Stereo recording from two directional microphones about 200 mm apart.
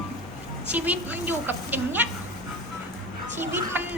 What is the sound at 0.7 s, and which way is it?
A woman's voice, 5° right (ahead or behind).